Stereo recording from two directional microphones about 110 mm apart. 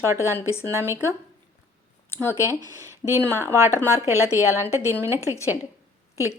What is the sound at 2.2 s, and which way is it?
Speech, 25° left (ahead or behind).